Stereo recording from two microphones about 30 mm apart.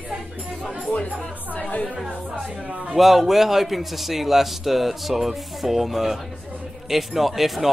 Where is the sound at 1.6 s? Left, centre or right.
Left.